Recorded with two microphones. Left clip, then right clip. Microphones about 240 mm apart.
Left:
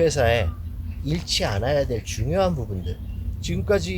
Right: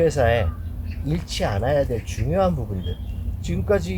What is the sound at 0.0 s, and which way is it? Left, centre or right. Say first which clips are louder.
Speech: right 1 dB; left.